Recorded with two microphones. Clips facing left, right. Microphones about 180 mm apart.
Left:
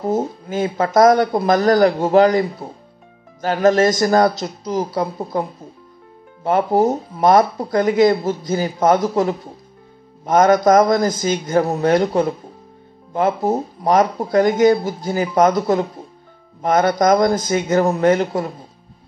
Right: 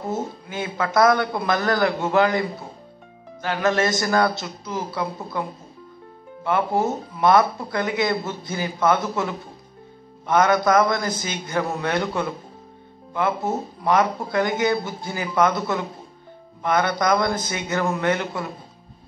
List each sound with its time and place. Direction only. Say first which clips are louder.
0.1 s speech: left 8 dB; 40° left (ahead or behind)
6.4 s speech: left 6 dB; 40° left (ahead or behind)